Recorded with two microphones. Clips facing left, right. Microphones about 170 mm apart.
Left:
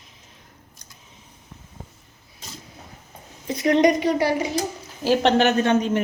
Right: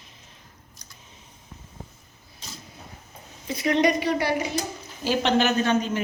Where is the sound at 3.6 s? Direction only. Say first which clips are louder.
Left 4 dB; 45° left (ahead or behind).